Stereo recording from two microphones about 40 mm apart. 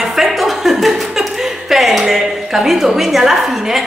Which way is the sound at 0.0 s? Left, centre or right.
Centre.